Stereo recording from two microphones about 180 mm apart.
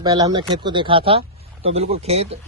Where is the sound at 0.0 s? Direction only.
20° right (ahead or behind).